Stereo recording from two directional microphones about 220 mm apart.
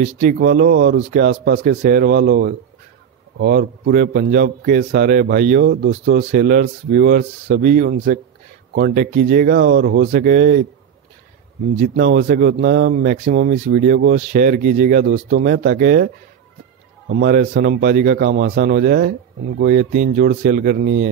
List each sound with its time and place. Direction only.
0.0 s a man's voice: 35° right (ahead or behind)
11.8 s a man's voice: 45° right (ahead or behind)
17.1 s a man's voice: 45° right (ahead or behind)